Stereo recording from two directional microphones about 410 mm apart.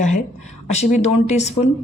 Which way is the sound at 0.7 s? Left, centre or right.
Centre.